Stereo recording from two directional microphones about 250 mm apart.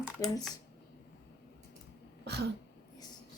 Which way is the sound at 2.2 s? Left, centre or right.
Right.